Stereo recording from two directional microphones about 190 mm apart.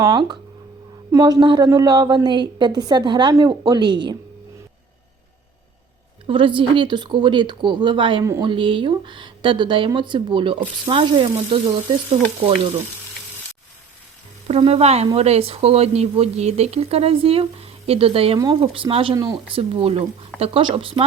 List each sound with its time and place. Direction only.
0.0 s a woman's voice: 20° right (ahead or behind)
6.2 s a woman's voice: 25° right (ahead or behind)
14.4 s a woman's voice: 30° right (ahead or behind)